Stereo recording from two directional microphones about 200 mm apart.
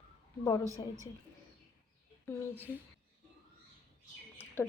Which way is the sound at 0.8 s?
20° left (ahead or behind).